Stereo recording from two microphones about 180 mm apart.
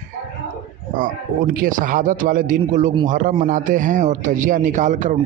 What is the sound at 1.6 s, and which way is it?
A man's voice, 50° right (ahead or behind).